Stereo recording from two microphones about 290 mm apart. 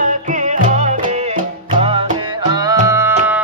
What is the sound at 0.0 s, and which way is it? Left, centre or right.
Music, right.